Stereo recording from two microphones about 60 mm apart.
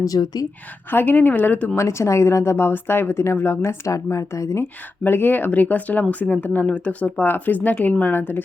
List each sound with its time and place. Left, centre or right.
0.0 s a woman's voice: left
0.9 s speech: left
1.7 s a woman's voice: left
3.9 s speech: left
4.6 s speech: left